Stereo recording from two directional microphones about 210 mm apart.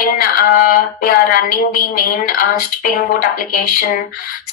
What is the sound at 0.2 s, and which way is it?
A woman's voice, 40° left (ahead or behind).